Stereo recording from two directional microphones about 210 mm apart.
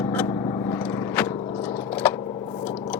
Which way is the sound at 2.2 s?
20° left (ahead or behind).